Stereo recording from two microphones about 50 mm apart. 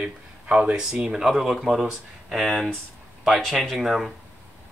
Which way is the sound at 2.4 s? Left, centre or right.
Centre.